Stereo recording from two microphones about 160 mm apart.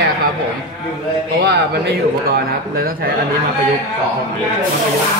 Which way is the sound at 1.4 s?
90° right.